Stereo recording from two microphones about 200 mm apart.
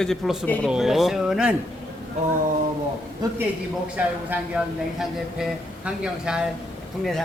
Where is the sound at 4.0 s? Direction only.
5° right (ahead or behind).